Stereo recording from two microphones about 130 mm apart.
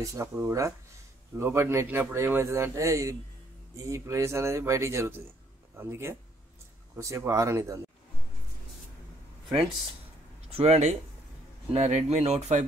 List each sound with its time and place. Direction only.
0.0 s speech: 20° right (ahead or behind)
10.5 s speech: 55° right (ahead or behind)